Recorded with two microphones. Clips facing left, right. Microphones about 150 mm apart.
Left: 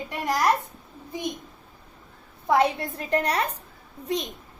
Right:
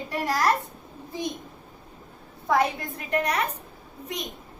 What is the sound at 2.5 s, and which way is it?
A woman's voice, 30° left (ahead or behind).